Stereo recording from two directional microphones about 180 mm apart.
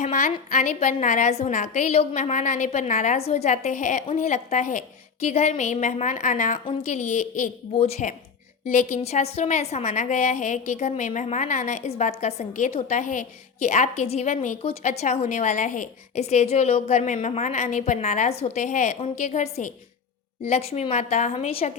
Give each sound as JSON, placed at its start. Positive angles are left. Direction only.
{"t": 0.0, "sound": "a woman's voice", "side_deg": 45}